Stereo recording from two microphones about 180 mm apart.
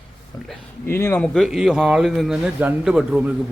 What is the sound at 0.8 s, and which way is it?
A man's voice, 15° left (ahead or behind).